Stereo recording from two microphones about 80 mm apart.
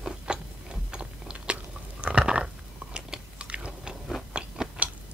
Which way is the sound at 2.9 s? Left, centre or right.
Centre.